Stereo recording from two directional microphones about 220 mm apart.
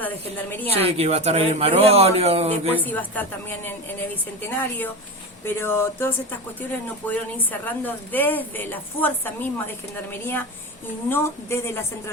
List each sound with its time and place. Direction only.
0.7 s speech: 25° right (ahead or behind)
2.8 s a woman's voice: 10° left (ahead or behind)